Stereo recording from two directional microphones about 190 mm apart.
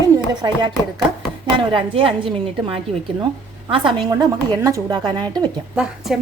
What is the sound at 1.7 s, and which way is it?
A woman's voice, 30° right (ahead or behind).